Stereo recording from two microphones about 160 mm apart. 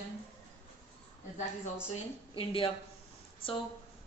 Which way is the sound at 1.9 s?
35° left (ahead or behind).